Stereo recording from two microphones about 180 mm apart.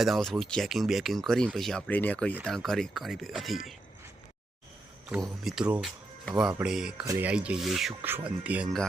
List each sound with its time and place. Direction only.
0.0 s speech: centre (ahead or behind)
5.2 s speech: centre (ahead or behind)
7.0 s speech: 20° right (ahead or behind)
7.3 s speech: 5° right (ahead or behind)